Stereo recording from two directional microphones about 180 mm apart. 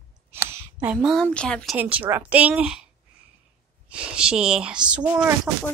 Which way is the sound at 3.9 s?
5° right (ahead or behind).